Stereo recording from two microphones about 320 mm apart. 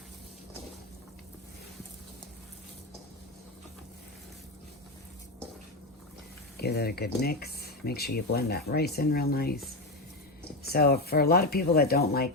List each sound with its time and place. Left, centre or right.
6.6 s speech: left
10.7 s speech: left